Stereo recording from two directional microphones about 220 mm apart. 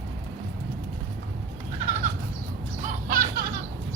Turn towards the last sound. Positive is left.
turn(degrees=-40)  # may be behind; listen again after turning